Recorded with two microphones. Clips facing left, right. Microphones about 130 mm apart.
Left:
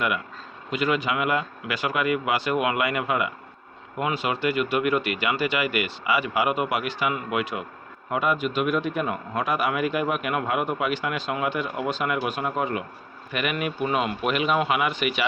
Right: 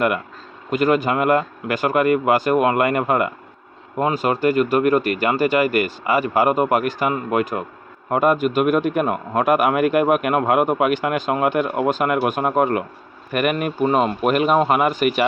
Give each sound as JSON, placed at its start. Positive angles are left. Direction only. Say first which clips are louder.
{"t": 0.7, "sound": "a man's voice", "louder": "right 7 dB", "side_deg": -45}